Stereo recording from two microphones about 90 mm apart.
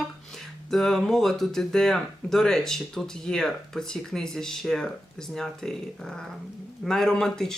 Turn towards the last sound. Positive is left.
turn(degrees=5)  # may be behind; listen again after turning